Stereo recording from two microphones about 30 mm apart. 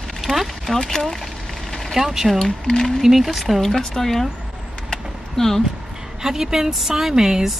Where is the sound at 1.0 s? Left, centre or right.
Centre.